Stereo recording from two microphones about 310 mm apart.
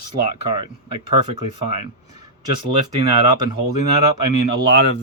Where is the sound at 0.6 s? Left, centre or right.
Centre.